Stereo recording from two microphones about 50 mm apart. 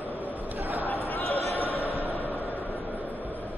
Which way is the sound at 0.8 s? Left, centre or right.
Left.